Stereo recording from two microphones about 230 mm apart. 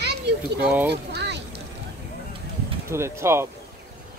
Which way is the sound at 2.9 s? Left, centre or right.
Centre.